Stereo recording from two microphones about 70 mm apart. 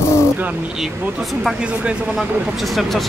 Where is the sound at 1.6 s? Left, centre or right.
Centre.